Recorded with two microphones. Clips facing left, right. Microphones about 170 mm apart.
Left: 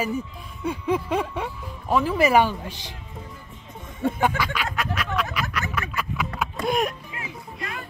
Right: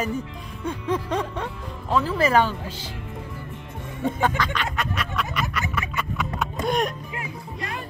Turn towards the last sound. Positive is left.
turn(degrees=0)  # may be behind; listen again after turning